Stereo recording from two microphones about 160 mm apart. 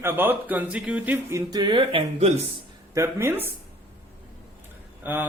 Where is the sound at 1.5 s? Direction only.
30° right (ahead or behind).